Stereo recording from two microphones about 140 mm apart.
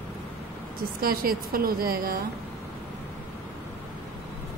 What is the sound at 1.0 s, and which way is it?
A woman's voice, 90° right.